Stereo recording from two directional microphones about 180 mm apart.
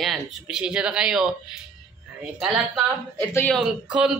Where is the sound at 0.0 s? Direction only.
Centre (ahead or behind).